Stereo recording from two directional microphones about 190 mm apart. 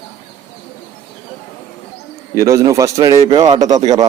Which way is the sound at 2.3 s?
15° right (ahead or behind).